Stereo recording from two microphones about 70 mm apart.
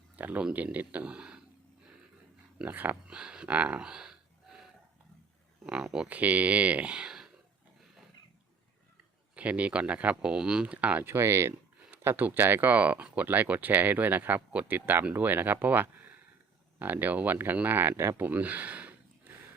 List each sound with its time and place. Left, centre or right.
0.2 s speech: right
2.6 s speech: right
3.1 s speech: centre
3.5 s a sound: centre
5.6 s speech: centre
6.1 s speech: right
9.3 s speech: centre; by 18.2 s right
18.2 s a sound: right